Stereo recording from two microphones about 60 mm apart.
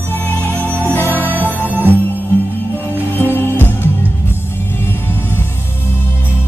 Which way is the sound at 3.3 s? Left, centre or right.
Left.